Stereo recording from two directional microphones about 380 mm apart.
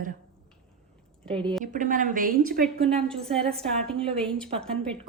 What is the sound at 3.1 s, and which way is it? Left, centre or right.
A woman's voice, centre.